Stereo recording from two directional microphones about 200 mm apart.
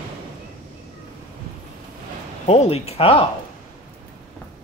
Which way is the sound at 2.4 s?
30° left (ahead or behind).